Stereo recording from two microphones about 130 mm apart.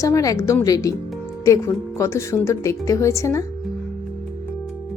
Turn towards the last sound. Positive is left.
turn(degrees=25)  # may be behind; listen again after turning